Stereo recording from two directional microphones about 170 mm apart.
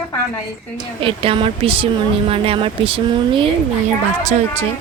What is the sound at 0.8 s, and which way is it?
Speech, 30° right (ahead or behind).